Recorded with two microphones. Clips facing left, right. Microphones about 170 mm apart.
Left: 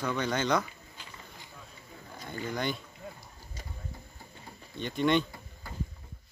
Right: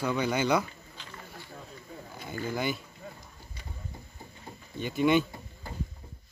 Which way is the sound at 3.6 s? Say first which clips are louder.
Left 1 dB; 40° left (ahead or behind).